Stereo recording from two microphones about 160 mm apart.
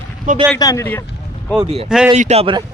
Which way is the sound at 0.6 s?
20° left (ahead or behind).